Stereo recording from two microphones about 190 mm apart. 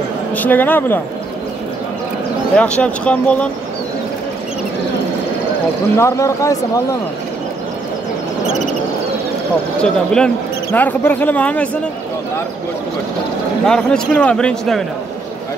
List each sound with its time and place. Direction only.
0.4 s speech: 10° left (ahead or behind)
2.5 s speech: 5° left (ahead or behind)
5.9 s speech: 15° left (ahead or behind)
9.8 s speech: 5° left (ahead or behind)
13.7 s a man's voice: 5° left (ahead or behind)